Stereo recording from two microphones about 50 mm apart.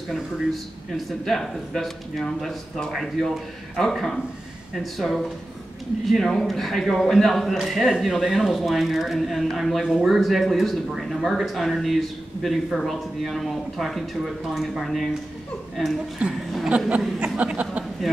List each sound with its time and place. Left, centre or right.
0.1 s a man's voice: centre
16.2 s a woman's voice: right
17.2 s a sound: right